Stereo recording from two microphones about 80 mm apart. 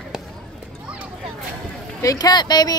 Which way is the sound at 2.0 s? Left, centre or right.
Left.